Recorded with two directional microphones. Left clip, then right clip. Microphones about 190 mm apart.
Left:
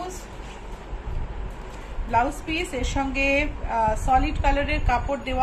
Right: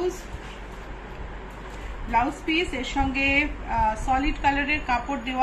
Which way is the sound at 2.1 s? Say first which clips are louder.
Even; 65° left (ahead or behind).